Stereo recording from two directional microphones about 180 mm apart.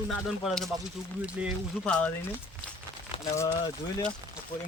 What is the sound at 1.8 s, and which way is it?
Speech, 5° left (ahead or behind).